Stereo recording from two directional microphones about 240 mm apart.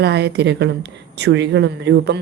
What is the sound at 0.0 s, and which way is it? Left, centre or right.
Speech, right.